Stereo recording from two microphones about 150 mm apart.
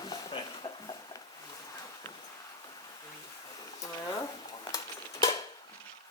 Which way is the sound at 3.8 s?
20° left (ahead or behind).